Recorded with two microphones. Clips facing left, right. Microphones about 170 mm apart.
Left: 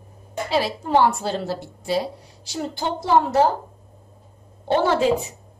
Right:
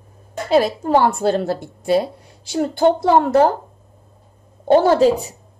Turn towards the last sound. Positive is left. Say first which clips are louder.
# right 5 dB
turn(degrees=-35)  # may be behind; listen again after turning